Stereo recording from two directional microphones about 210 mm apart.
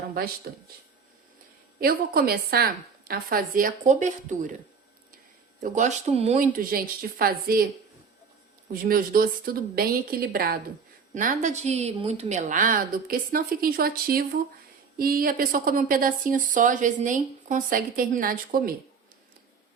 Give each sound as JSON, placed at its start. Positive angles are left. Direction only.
{"t": 0.5, "sound": "a woman's voice", "side_deg": -45}
{"t": 1.8, "sound": "a woman's voice", "side_deg": -45}
{"t": 5.5, "sound": "a woman's voice", "side_deg": -35}
{"t": 8.7, "sound": "a woman's voice", "side_deg": -45}